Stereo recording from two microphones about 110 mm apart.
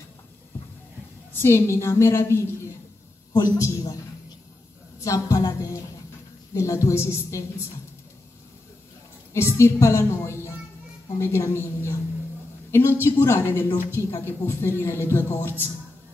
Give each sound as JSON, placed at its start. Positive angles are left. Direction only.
{"t": 1.3, "sound": "a man's voice", "side_deg": 20}
{"t": 5.0, "sound": "a man's voice", "side_deg": 30}
{"t": 9.3, "sound": "a man's voice", "side_deg": 25}